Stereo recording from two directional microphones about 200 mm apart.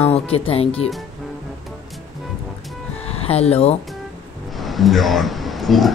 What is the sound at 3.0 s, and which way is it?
Music, 30° left (ahead or behind).